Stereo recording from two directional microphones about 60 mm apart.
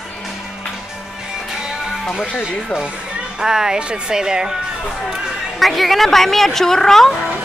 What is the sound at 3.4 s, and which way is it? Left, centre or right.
Speech, centre.